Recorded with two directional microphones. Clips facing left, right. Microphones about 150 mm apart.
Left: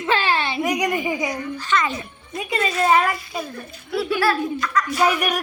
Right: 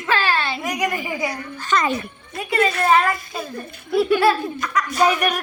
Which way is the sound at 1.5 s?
40° right (ahead or behind).